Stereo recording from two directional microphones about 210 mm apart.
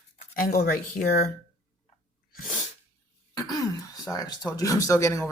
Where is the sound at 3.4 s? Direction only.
15° left (ahead or behind).